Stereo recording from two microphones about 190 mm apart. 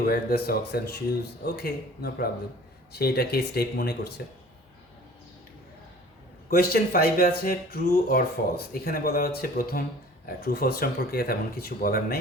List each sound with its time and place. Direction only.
0.0 s speech: 50° left (ahead or behind)
6.5 s speech: 55° left (ahead or behind)